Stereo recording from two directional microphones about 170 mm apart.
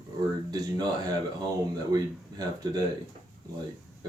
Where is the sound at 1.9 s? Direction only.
20° right (ahead or behind).